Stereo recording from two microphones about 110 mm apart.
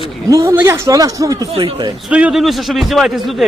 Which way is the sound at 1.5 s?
55° right (ahead or behind).